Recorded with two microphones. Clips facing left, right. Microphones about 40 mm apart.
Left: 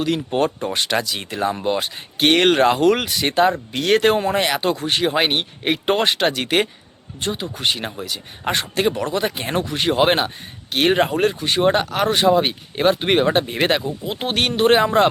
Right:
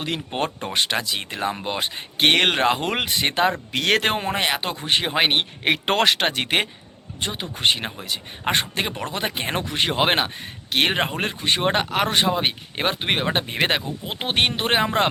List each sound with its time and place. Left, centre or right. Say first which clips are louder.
0.0 s speech: left 7 dB; right
0.3 s speech: left 5 dB; right
0.8 s speech: even; centre
3.7 s speech: left 3 dB; right
4.0 s speech: left 5 dB; right
5.3 s speech: even; right
6.2 s speech: left 3 dB; right
7.6 s speech: right 2 dB; right
10.8 s speech: left 11 dB; right
11.3 s speech: left 4 dB; right
13.1 s speech: left 5 dB; centre
13.3 s speech: left 4 dB; right